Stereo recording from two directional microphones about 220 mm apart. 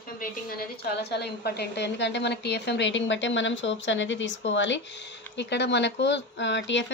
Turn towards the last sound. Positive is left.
turn(degrees=55)  # may be behind; listen again after turning